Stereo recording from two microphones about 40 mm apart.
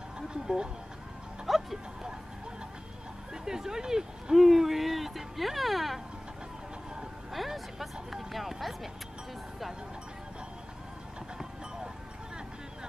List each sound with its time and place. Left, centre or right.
0.3 s speech: right
1.4 s music: centre
3.4 s speech: centre
7.3 s speech: centre